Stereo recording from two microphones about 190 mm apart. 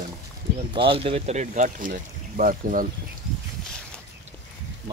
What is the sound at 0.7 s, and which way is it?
Speech, 30° right (ahead or behind).